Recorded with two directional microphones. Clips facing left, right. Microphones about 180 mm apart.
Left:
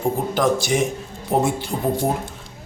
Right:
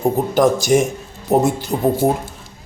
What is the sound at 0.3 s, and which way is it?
A man's voice, 45° right (ahead or behind).